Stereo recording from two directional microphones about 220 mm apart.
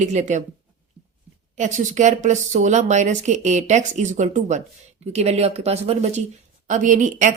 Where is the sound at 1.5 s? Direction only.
35° right (ahead or behind).